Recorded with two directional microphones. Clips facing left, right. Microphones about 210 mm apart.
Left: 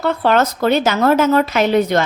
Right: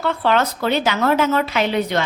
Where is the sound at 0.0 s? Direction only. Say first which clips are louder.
Left 3 dB; 40° left (ahead or behind).